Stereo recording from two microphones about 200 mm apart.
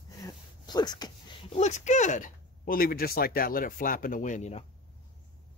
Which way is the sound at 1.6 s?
35° left (ahead or behind).